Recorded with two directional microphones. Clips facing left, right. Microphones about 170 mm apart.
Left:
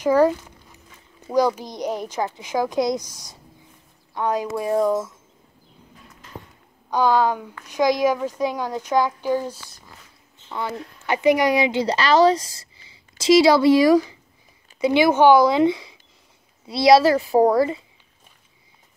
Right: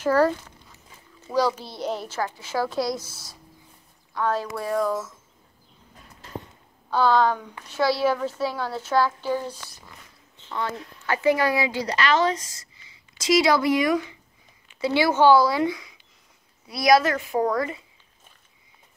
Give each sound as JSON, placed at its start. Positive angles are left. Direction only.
{"t": 0.0, "sound": "a sound", "side_deg": 15}
{"t": 1.3, "sound": "a child's voice", "side_deg": 15}
{"t": 6.9, "sound": "a child's voice", "side_deg": 15}
{"t": 14.8, "sound": "a child's voice", "side_deg": 20}